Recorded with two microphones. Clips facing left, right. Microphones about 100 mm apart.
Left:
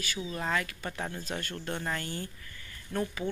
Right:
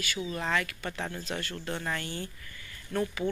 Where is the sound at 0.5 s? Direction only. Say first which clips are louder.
Right 2 dB; 35° left (ahead or behind).